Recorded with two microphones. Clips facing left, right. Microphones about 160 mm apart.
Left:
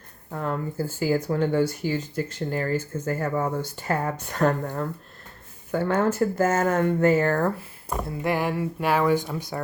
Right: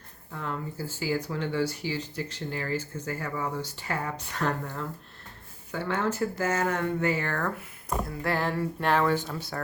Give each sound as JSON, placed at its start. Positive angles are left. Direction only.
{"t": 0.3, "sound": "speech", "side_deg": 45}
{"t": 8.0, "sound": "speech", "side_deg": 15}